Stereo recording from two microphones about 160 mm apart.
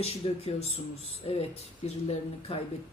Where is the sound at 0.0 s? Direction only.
40° left (ahead or behind).